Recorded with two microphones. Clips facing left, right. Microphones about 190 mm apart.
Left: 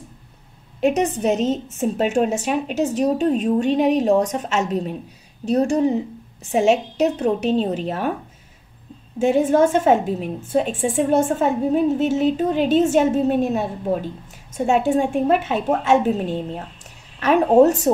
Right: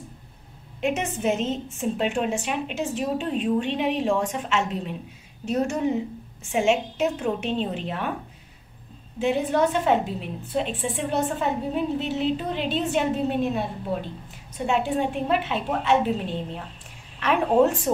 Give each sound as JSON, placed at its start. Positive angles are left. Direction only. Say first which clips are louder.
{"t": 0.7, "sound": "a woman's voice", "louder": "left 7 dB", "side_deg": 40}
{"t": 9.2, "sound": "a woman's voice", "louder": "left 6 dB", "side_deg": 45}